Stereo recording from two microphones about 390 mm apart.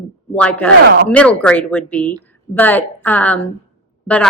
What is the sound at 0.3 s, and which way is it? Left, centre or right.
Speech, centre.